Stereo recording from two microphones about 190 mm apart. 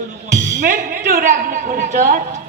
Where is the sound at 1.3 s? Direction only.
40° right (ahead or behind).